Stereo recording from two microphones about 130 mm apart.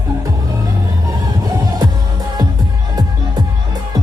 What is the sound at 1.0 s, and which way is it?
Music, 30° right (ahead or behind).